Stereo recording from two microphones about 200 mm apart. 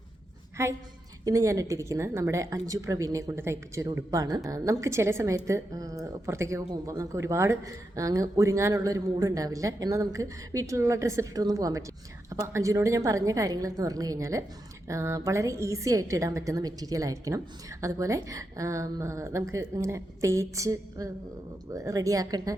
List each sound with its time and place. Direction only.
0.6 s a woman's voice: 15° right (ahead or behind)